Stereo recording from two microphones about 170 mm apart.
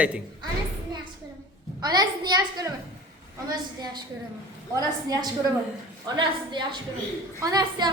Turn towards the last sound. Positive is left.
turn(degrees=-20)  # may be behind; listen again after turning